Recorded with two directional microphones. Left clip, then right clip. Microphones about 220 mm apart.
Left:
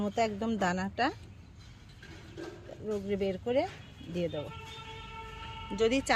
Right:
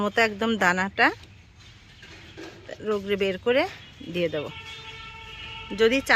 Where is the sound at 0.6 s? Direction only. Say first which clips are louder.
Right 10 dB; centre (ahead or behind).